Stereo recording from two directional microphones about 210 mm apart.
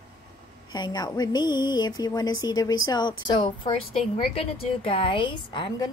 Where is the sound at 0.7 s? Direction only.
20° left (ahead or behind).